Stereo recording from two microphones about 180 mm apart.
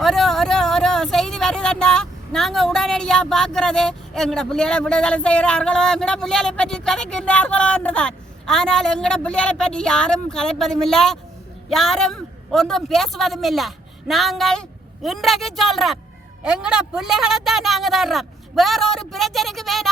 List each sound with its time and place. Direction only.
0.0 s a man's voice: centre (ahead or behind)